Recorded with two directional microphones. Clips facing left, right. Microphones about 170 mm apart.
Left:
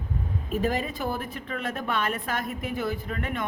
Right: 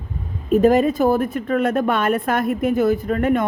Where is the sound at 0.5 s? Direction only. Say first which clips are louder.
Right 13 dB; 45° right (ahead or behind).